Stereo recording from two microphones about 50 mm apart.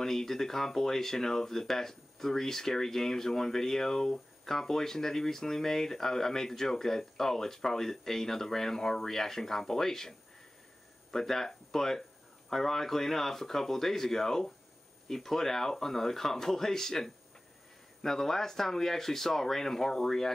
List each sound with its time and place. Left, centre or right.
0.0 s speech: centre